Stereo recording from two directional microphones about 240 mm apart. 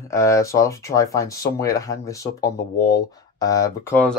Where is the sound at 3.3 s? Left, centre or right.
Centre.